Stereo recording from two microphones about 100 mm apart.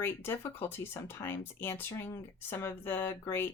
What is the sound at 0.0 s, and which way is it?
Speech, 20° left (ahead or behind).